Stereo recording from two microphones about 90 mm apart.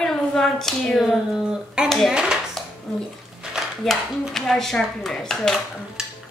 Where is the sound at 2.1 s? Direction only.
10° right (ahead or behind).